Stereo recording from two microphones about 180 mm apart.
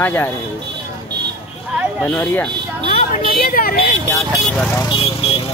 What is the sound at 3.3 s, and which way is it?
Speech, 55° left (ahead or behind).